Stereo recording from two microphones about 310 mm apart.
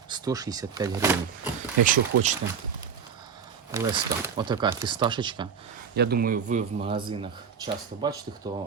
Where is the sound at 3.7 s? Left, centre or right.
Centre.